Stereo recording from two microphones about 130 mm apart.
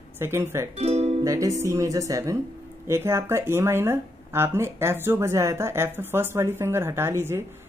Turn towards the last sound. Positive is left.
turn(degrees=-20)  # may be behind; listen again after turning